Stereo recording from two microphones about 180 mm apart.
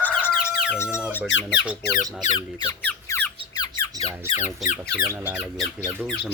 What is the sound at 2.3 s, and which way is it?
Squeak, 25° left (ahead or behind).